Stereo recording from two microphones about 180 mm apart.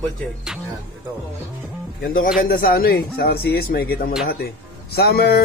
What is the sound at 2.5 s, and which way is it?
Speech, 55° left (ahead or behind).